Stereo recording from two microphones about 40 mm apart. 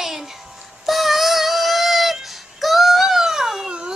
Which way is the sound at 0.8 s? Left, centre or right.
Centre.